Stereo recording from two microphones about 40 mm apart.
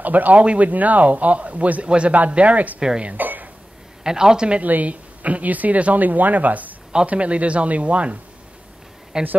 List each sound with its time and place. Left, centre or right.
0.0 s speech: right
0.4 s a man's voice: right
0.7 s a man's voice: right
3.2 s a sound: right
4.0 s a woman's voice: centre
4.6 s a man's voice: right
9.1 s speech: right